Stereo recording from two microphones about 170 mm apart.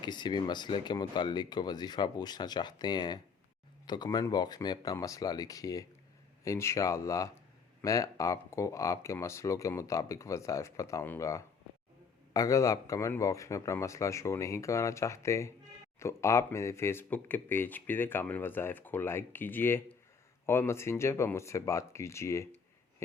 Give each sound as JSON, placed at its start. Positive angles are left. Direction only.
{"t": 0.0, "sound": "speech", "side_deg": 25}